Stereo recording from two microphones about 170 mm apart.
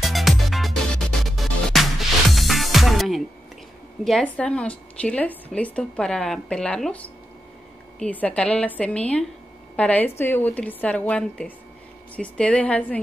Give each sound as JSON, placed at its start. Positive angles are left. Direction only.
{"t": 0.0, "sound": "music", "side_deg": 0}
{"t": 4.0, "sound": "a woman's voice", "side_deg": 5}
{"t": 8.0, "sound": "a woman's voice", "side_deg": 10}